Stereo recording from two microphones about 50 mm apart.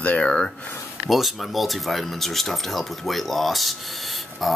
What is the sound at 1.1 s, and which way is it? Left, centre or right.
Speech, centre.